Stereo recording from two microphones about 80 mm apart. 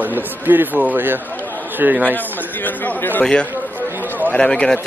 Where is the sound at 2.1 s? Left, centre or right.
Left.